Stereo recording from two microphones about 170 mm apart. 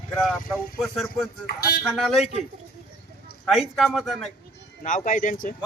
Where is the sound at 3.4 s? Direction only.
Centre (ahead or behind).